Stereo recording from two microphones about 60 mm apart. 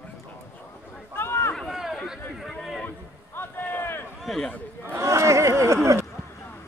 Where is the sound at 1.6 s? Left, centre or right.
Centre.